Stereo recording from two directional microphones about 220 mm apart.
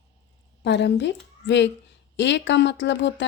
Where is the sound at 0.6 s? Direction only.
50° left (ahead or behind).